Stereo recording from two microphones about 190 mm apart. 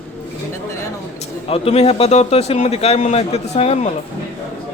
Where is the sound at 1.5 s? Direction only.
30° left (ahead or behind).